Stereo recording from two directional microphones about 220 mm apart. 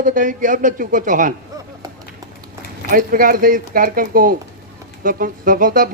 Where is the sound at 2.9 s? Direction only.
40° right (ahead or behind).